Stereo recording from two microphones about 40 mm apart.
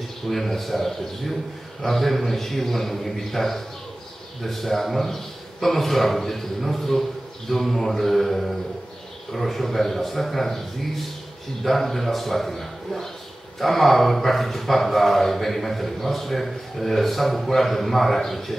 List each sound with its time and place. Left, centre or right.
0.3 s speech: centre